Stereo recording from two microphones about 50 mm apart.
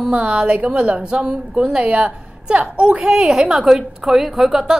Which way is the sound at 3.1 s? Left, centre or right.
Centre.